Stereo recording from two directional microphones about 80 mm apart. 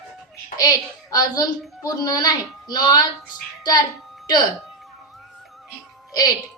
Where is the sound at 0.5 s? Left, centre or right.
Left.